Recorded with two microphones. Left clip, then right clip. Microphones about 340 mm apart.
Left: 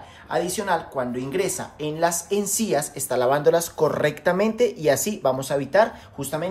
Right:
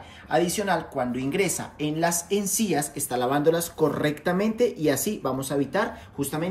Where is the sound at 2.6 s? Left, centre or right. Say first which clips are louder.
Left 3 dB; centre.